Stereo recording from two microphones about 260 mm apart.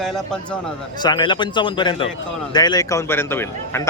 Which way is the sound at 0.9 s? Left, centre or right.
Centre.